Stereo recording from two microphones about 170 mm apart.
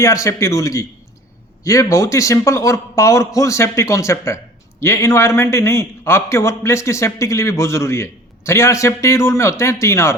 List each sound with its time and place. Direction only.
0.0 s a man's voice: 20° left (ahead or behind)